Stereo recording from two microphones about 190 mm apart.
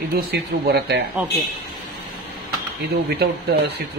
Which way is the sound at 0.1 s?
55° right (ahead or behind).